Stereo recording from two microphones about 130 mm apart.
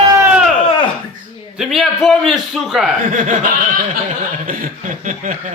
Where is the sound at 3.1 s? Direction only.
80° right.